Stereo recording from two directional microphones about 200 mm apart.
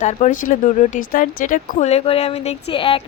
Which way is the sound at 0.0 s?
40° left (ahead or behind).